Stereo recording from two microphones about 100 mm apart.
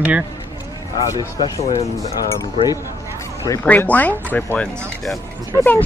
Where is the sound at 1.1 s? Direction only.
40° left (ahead or behind).